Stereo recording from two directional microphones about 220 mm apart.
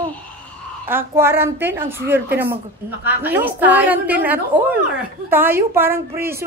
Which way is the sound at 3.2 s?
10° right (ahead or behind).